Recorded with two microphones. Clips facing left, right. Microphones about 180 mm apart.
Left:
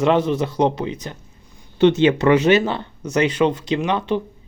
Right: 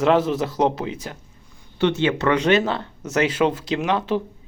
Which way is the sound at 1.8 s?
20° left (ahead or behind).